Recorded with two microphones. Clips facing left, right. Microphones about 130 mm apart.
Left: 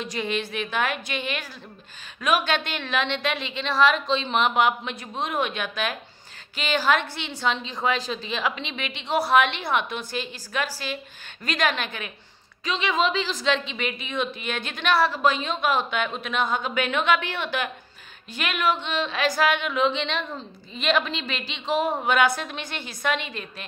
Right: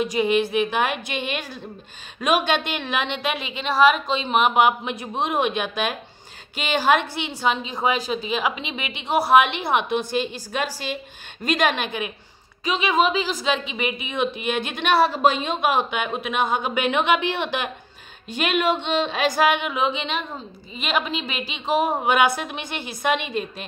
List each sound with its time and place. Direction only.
0.0 s a woman's voice: 10° right (ahead or behind)